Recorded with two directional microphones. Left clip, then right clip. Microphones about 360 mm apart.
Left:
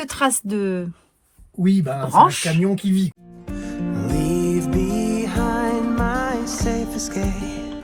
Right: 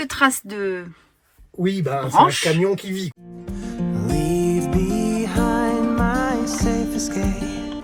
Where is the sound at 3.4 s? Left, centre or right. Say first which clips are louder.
Left 1 dB; centre.